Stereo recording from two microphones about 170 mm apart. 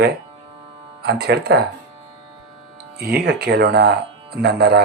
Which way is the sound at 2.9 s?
70° right (ahead or behind).